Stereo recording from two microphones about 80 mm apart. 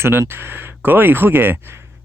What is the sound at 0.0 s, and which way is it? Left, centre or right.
Speech, right.